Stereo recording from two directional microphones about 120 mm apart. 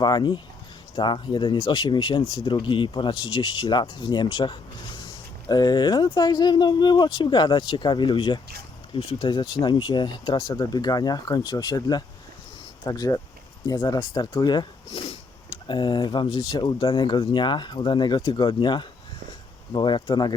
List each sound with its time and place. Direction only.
0.0 s speech: 35° left (ahead or behind); by 15.2 s 55° left (ahead or behind)
15.6 s speech: 40° left (ahead or behind)